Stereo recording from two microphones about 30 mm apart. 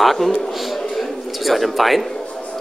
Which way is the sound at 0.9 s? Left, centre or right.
Centre.